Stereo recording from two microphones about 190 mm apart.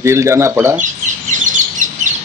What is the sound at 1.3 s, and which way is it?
Bird, 40° right (ahead or behind).